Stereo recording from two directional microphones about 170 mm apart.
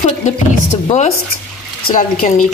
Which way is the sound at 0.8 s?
35° left (ahead or behind).